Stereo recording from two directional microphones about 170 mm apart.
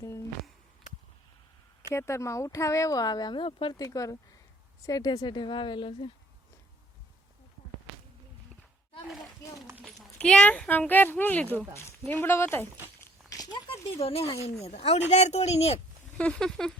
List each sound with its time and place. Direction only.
1.9 s speech: 15° left (ahead or behind)
9.4 s a sound: 20° left (ahead or behind)
9.8 s speech: 5° left (ahead or behind)
13.0 s a sound: 20° left (ahead or behind)
13.9 s speech: 35° left (ahead or behind)
16.1 s speech: 5° left (ahead or behind)